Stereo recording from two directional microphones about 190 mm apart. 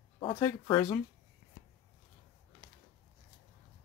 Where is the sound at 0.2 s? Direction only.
25° left (ahead or behind).